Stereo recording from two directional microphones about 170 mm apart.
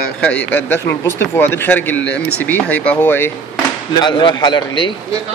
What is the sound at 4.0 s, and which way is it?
Speech, 25° left (ahead or behind).